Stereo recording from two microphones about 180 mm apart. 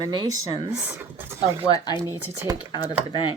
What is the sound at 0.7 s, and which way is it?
Speech, 5° right (ahead or behind).